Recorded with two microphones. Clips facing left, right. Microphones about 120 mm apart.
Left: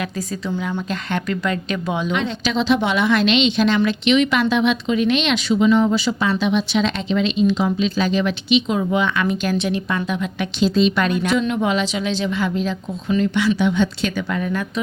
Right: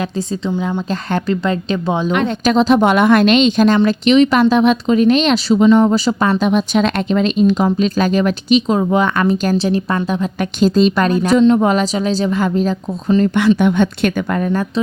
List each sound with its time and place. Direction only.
0.4 s speech: 25° right (ahead or behind)
0.7 s speech: 35° right (ahead or behind)
2.1 s a woman's voice: 50° right (ahead or behind)
13.6 s a woman's voice: 55° right (ahead or behind)